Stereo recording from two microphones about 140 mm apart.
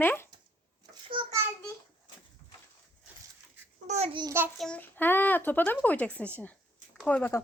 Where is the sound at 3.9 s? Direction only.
50° right (ahead or behind).